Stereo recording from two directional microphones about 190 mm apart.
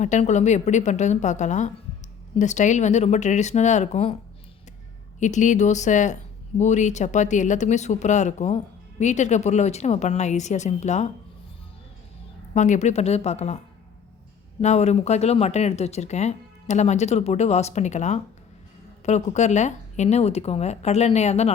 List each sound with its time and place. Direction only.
0.0 s speech: 40° left (ahead or behind)
5.2 s speech: 40° left (ahead or behind)
12.5 s speech: 40° left (ahead or behind)
14.6 s speech: 35° left (ahead or behind)